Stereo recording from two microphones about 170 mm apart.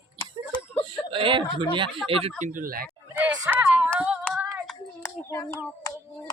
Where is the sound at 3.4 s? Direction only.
10° right (ahead or behind).